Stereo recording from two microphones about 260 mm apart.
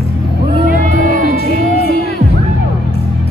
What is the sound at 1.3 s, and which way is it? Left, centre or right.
Music, left.